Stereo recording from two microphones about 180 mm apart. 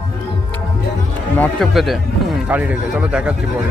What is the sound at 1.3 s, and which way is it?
Speech, 5° left (ahead or behind).